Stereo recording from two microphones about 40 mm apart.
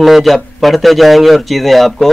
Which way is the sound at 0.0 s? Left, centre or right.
Centre.